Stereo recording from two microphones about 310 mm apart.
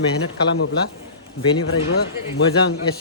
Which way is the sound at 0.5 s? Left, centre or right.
Left.